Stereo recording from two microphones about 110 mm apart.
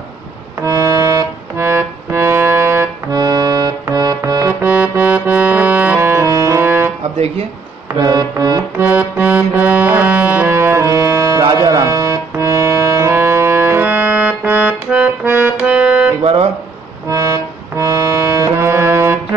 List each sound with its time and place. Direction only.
0.6 s music: 30° right (ahead or behind)
4.6 s music: 15° right (ahead or behind)
8.0 s music: 35° right (ahead or behind)
8.7 s music: 15° right (ahead or behind)
10.5 s music: 25° right (ahead or behind); by 16.1 s 10° right (ahead or behind)
16.2 s guitar: 65° right (ahead or behind)
17.1 s accordion: 25° right (ahead or behind)